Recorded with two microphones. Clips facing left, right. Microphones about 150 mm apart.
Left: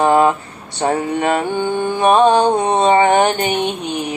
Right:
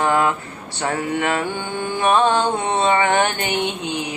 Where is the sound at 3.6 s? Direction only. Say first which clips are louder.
Left 3 dB; 15° right (ahead or behind).